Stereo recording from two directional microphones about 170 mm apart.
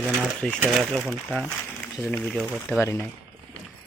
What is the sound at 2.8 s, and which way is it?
Speech, 15° left (ahead or behind).